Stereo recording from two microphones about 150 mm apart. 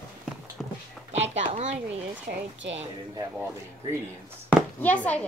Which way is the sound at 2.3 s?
90° right.